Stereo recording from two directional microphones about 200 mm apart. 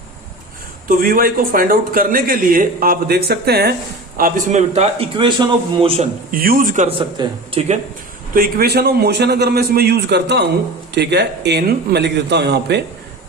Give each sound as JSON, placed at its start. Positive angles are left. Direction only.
{"t": 0.9, "sound": "a man's voice", "side_deg": -45}
{"t": 4.2, "sound": "a man's voice", "side_deg": -40}
{"t": 6.3, "sound": "a man's voice", "side_deg": -45}
{"t": 6.8, "sound": "speech", "side_deg": -25}
{"t": 8.3, "sound": "a man's voice", "side_deg": -45}